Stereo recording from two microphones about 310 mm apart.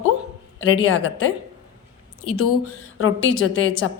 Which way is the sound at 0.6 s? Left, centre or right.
Left.